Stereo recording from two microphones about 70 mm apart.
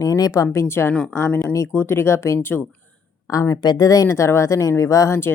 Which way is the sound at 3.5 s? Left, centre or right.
Left.